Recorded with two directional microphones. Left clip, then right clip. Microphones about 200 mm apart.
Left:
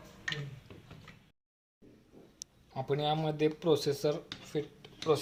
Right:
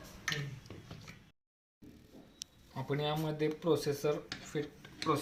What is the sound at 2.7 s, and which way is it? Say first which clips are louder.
Speech: left 4 dB; 60° left (ahead or behind).